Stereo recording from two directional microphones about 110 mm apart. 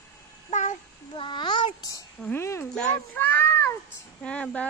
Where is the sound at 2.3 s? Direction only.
25° left (ahead or behind).